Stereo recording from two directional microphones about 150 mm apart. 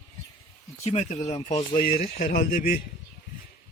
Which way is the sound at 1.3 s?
30° left (ahead or behind).